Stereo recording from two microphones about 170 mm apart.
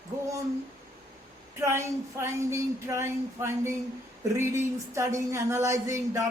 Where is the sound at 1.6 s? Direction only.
15° right (ahead or behind).